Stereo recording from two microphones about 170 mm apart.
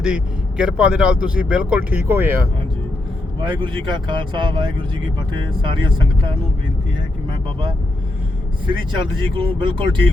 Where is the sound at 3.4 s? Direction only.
30° right (ahead or behind).